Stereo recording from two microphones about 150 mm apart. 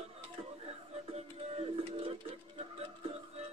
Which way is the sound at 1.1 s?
40° right (ahead or behind).